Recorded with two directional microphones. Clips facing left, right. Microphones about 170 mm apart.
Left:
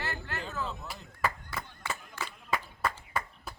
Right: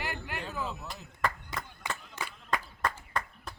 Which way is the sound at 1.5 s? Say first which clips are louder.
Even; 20° right (ahead or behind).